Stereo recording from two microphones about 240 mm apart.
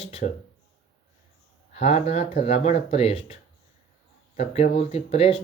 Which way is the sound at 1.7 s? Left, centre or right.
Left.